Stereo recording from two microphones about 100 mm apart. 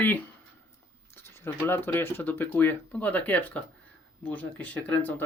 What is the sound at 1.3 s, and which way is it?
Speech, 25° left (ahead or behind).